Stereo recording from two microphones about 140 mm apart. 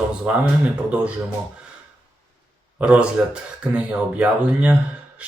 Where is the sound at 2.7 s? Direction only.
10° right (ahead or behind).